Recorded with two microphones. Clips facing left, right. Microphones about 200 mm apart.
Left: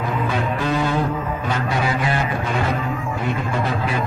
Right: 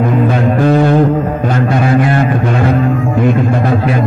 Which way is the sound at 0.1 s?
55° right (ahead or behind).